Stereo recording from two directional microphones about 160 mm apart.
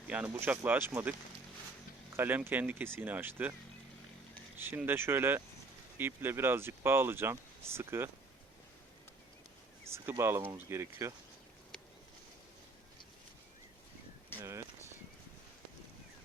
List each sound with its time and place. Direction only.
0.1 s speech: 10° right (ahead or behind)
2.1 s speech: 15° right (ahead or behind)
4.5 s speech: 10° right (ahead or behind)
9.9 s speech: 15° right (ahead or behind)
14.4 s a sound: 20° right (ahead or behind)